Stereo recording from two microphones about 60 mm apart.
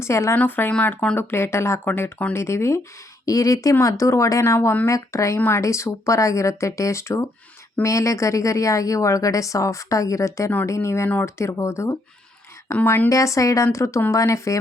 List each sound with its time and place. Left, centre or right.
0.0 s speech: left
0.3 s speech: left
1.1 s speech: left
1.9 s speech: left
2.3 s speech: left
3.2 s a woman's voice: left
5.4 s a woman's voice: left